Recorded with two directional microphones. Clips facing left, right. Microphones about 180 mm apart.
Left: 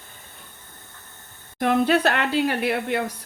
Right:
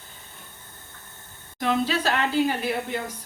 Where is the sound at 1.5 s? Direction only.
55° left (ahead or behind).